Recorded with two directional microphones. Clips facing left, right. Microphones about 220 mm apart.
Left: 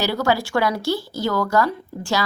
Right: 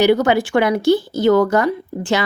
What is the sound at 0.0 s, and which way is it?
A woman's voice, 20° right (ahead or behind).